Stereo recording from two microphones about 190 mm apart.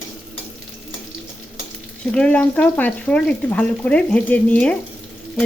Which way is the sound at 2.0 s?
5° left (ahead or behind).